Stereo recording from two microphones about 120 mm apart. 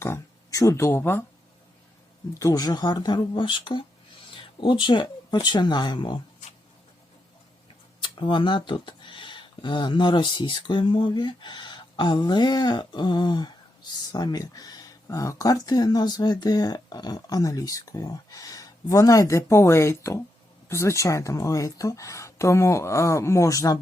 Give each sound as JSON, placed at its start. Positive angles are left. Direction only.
{"t": 0.0, "sound": "speech", "side_deg": 25}
{"t": 2.4, "sound": "speech", "side_deg": 30}
{"t": 8.0, "sound": "speech", "side_deg": 40}